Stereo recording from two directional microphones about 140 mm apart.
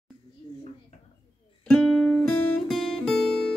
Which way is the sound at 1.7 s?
5° left (ahead or behind).